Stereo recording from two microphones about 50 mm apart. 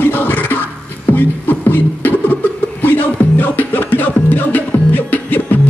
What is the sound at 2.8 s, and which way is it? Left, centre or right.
Music, left.